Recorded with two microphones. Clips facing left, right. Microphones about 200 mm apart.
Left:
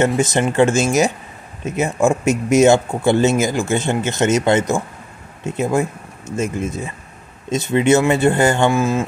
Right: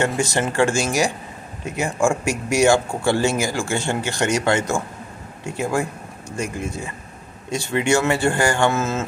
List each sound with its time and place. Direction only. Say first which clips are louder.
0.2 s speech: left 4 dB; 20° left (ahead or behind)